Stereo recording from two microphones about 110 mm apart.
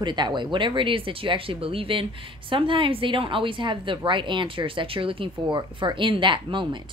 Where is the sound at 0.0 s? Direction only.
45° right (ahead or behind).